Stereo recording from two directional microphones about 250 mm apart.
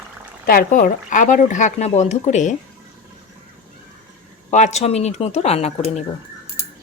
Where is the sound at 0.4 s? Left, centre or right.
Left.